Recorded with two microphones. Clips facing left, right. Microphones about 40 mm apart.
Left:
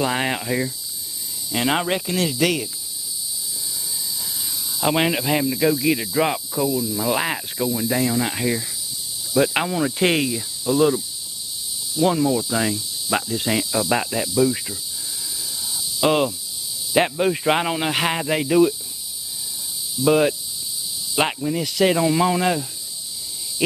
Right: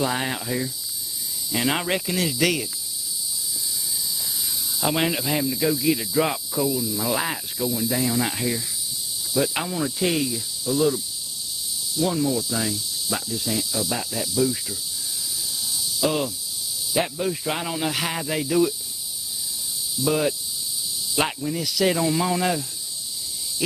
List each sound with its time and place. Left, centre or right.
0.0 s speech: left
1.5 s cricket: centre
4.7 s speech: centre
6.5 s cricket: centre
7.1 s speech: left
8.1 s speech: centre
9.4 s speech: left
9.8 s speech: left
12.0 s speech: left
13.4 s snake: left
14.3 s speech: left
15.7 s snake: left
16.9 s speech: left
20.0 s speech: left